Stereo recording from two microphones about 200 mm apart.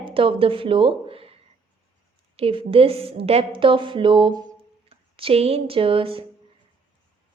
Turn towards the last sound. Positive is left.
turn(degrees=-25)  # may be behind; listen again after turning